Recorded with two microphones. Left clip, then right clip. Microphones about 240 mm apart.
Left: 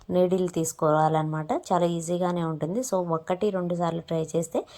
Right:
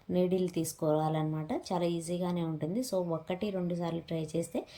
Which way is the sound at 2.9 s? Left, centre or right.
Left.